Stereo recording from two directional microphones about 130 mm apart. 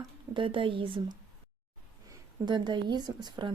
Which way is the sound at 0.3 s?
40° right (ahead or behind).